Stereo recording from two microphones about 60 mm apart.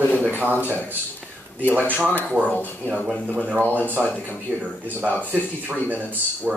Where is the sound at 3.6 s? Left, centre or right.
Left.